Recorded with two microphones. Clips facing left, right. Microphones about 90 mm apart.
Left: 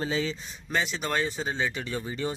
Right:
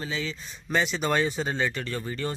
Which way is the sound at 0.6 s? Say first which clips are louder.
Right 3 dB; centre (ahead or behind).